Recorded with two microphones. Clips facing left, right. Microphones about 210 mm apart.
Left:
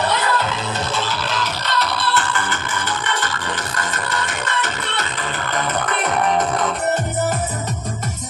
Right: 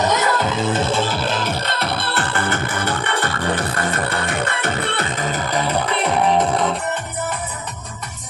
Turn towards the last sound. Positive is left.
turn(degrees=40)  # may be behind; listen again after turning